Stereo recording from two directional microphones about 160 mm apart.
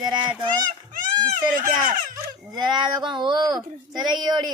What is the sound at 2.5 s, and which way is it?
Speech, 25° right (ahead or behind).